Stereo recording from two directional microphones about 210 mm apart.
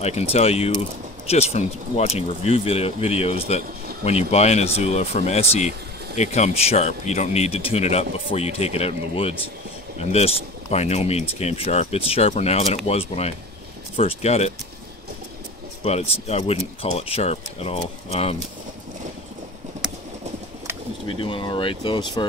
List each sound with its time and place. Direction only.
0.0 s speech: 30° left (ahead or behind)
15.8 s speech: 30° left (ahead or behind)
21.2 s speech: 25° left (ahead or behind)